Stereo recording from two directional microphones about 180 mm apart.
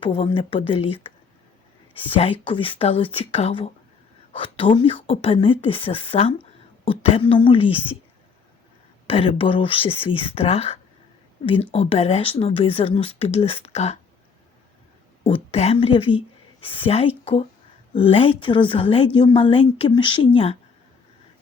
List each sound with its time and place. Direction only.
0.0 s a woman's voice: 30° left (ahead or behind)
9.0 s a woman's voice: 30° left (ahead or behind)
15.2 s a woman's voice: 35° left (ahead or behind)